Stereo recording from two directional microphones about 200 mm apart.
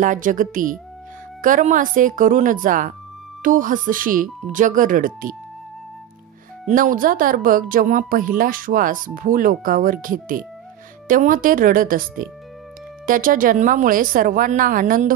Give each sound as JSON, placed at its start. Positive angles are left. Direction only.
{"t": 0.0, "sound": "speech", "side_deg": -40}
{"t": 6.7, "sound": "speech", "side_deg": -45}